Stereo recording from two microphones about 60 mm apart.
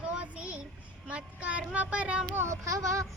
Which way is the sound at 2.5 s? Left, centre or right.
Right.